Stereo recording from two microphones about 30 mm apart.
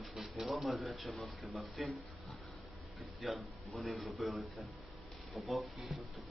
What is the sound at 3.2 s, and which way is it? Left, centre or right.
A man's voice, centre.